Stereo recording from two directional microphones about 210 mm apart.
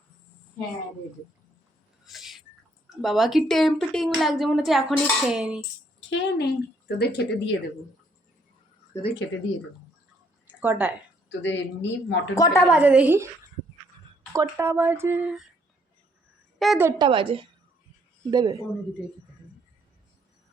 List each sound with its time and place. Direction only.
2.0 s a sound: centre (ahead or behind)
3.0 s a woman's voice: centre (ahead or behind)
6.1 s a woman's voice: 55° left (ahead or behind)
9.0 s speech: 60° left (ahead or behind)
10.6 s speech: 10° right (ahead or behind)
11.3 s speech: 60° left (ahead or behind)
12.3 s speech: 15° left (ahead or behind)
12.7 s speech: 5° right (ahead or behind)
14.3 s speech: 10° right (ahead or behind)
16.6 s a woman's voice: centre (ahead or behind)
16.8 s a woman's voice: 20° right (ahead or behind)